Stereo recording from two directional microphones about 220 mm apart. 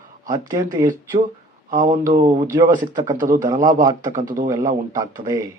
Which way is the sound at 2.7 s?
35° right (ahead or behind).